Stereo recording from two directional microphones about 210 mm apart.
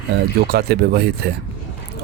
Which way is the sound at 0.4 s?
50° right (ahead or behind).